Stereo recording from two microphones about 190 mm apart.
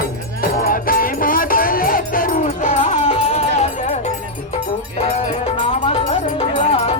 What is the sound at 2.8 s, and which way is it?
Music, 35° left (ahead or behind).